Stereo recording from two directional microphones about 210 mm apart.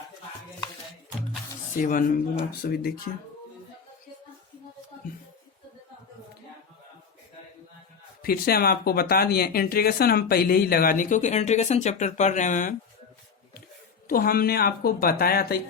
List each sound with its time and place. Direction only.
1.8 s speech: 40° left (ahead or behind)
8.2 s speech: 45° left (ahead or behind)
14.1 s speech: 45° left (ahead or behind)